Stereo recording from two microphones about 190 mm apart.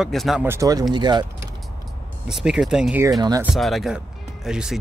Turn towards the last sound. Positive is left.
turn(degrees=-5)  # may be behind; listen again after turning